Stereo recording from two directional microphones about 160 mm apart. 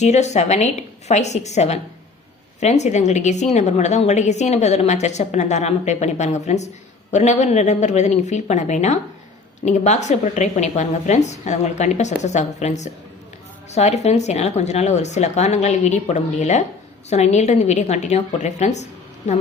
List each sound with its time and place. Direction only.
0.0 s a woman's voice: 45° left (ahead or behind)